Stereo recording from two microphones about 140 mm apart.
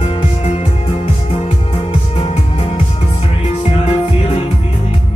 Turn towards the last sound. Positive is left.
turn(degrees=40)  # may be behind; listen again after turning